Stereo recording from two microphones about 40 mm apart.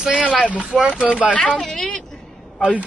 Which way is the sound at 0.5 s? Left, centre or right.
Right.